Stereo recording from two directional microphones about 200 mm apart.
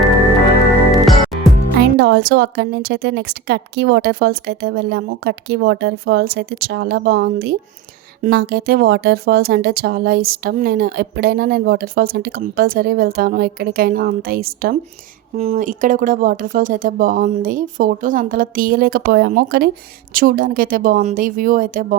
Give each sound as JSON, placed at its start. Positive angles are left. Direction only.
{"t": 1.0, "sound": "music", "side_deg": 0}
{"t": 2.0, "sound": "speech", "side_deg": -55}
{"t": 15.4, "sound": "speech", "side_deg": -35}